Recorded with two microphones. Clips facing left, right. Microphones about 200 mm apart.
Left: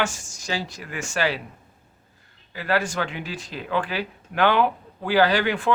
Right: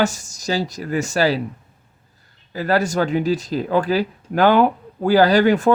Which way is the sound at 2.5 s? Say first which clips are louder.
Right 5 dB; 40° right (ahead or behind).